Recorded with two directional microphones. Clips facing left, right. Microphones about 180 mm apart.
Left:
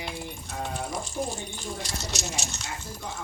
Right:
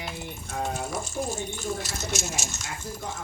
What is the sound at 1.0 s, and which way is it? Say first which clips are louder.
Speech: right 1 dB; 45° right (ahead or behind).